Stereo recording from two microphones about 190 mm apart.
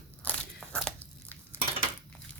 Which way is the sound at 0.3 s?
5° left (ahead or behind).